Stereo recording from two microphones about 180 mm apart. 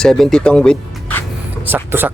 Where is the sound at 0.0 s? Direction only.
5° left (ahead or behind).